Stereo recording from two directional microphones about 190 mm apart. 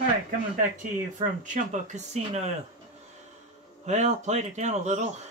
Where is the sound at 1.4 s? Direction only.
40° right (ahead or behind).